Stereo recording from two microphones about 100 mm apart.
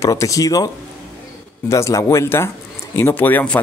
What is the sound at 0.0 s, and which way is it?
Speech, 35° left (ahead or behind).